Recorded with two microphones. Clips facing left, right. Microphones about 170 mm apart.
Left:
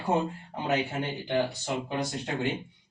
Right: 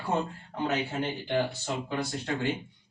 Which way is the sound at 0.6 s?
15° left (ahead or behind).